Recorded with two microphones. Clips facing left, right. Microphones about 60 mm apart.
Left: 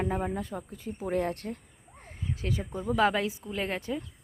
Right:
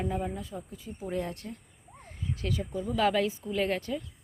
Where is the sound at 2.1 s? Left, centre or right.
Left.